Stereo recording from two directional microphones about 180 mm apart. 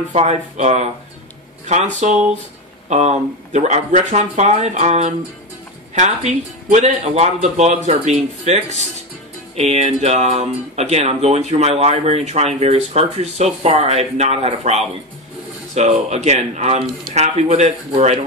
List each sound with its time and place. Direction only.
0.1 s speech: 40° right (ahead or behind)
2.0 s speech: 40° right (ahead or behind)
9.6 s speech: 35° right (ahead or behind)